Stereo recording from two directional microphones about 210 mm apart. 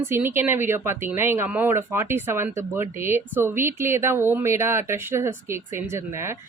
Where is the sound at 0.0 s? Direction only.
10° right (ahead or behind).